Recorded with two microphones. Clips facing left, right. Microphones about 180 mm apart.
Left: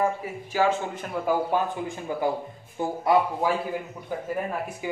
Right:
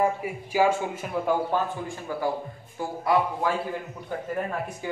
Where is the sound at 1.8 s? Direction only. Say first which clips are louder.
Left 2 dB; 20° left (ahead or behind).